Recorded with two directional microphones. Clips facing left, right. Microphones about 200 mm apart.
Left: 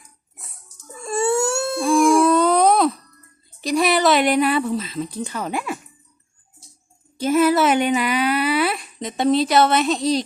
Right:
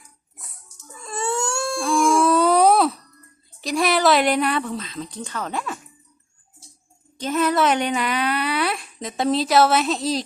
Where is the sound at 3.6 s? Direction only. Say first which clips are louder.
Left 2 dB; centre (ahead or behind).